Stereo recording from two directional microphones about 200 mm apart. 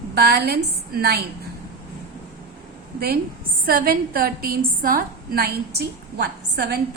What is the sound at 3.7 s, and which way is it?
A woman's voice, 45° right (ahead or behind).